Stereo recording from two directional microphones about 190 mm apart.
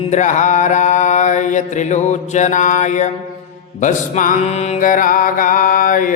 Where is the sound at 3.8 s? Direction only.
40° left (ahead or behind).